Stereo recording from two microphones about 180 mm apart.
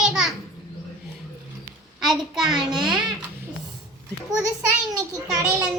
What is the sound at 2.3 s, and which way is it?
Speech, centre (ahead or behind).